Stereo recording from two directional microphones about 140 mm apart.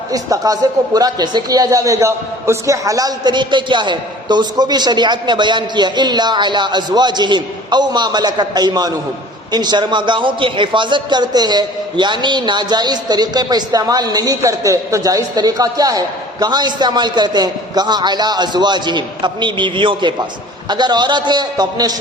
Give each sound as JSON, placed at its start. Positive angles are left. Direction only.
{"t": 0.1, "sound": "a man's voice", "side_deg": -25}